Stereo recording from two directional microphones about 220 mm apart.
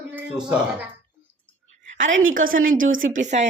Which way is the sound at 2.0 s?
60° right (ahead or behind).